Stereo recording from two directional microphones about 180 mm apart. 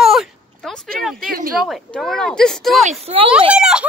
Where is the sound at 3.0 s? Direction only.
30° right (ahead or behind).